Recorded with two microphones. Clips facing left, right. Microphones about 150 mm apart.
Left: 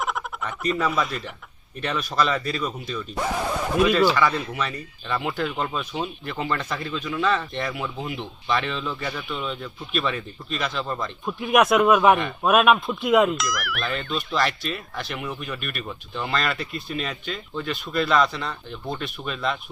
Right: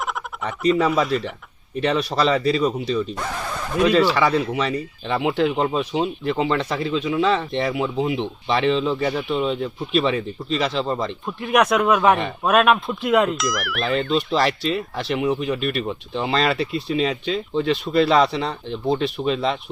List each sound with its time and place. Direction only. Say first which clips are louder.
0.8 s speech: right 6 dB; 30° right (ahead or behind)
3.2 s a sound: left 3 dB; 10° left (ahead or behind)
4.1 s speech: right 4 dB; 30° right (ahead or behind)
11.3 s speech: even; 5° left (ahead or behind)
14.3 s speech: right 5 dB; 30° right (ahead or behind)